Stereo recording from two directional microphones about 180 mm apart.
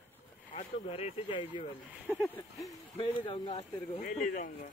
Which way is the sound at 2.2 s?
10° left (ahead or behind).